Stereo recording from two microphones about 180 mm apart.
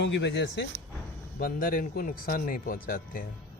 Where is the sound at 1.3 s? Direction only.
50° left (ahead or behind).